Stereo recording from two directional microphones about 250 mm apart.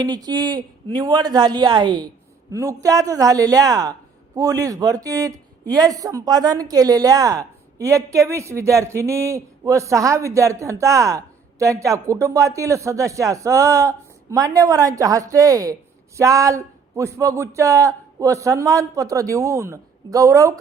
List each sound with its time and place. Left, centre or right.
0.0 s speech: centre